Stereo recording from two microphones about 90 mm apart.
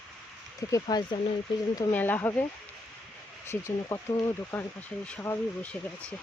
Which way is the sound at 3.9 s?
20° left (ahead or behind).